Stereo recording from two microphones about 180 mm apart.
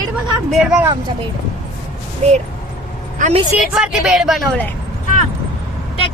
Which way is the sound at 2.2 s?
40° right (ahead or behind).